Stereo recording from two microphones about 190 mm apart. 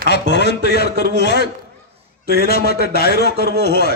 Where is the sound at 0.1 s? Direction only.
60° left (ahead or behind).